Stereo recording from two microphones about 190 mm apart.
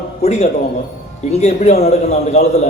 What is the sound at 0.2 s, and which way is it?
A man's voice, 35° left (ahead or behind).